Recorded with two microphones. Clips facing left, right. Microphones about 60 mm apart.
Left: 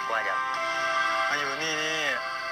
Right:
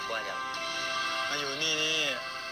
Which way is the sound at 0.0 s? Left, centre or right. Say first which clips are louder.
Left 7 dB; left.